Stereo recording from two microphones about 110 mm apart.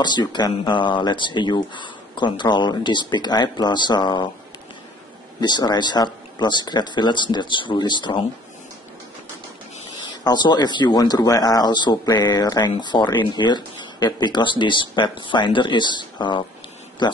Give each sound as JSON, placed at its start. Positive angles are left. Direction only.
{"t": 0.0, "sound": "speech", "side_deg": 40}
{"t": 5.4, "sound": "speech", "side_deg": 40}
{"t": 10.2, "sound": "speech", "side_deg": 40}